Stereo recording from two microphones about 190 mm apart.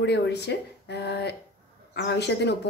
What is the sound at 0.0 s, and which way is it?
Speech, 65° left (ahead or behind).